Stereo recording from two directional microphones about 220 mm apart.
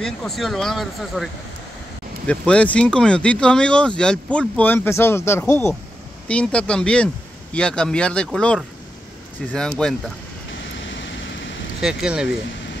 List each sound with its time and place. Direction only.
0.0 s speech: centre (ahead or behind)
10.9 s vehicle: 55° left (ahead or behind)
11.8 s speech: 5° right (ahead or behind)